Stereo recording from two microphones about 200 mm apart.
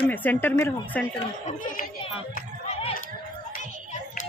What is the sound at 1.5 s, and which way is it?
Speech, 40° left (ahead or behind).